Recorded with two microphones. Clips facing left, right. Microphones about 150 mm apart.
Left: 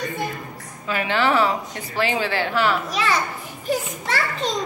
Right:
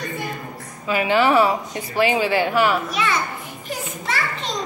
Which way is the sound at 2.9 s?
35° left (ahead or behind).